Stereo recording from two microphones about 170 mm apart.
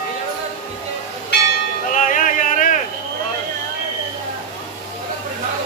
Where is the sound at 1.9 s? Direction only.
50° left (ahead or behind).